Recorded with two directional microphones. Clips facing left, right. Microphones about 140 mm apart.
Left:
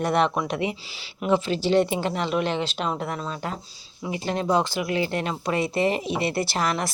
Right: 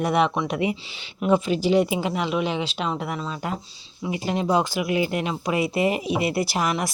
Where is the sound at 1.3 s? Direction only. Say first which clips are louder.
Right 1 dB; 10° right (ahead or behind).